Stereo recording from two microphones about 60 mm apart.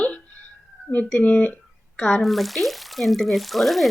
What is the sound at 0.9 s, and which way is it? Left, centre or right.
Speech, centre.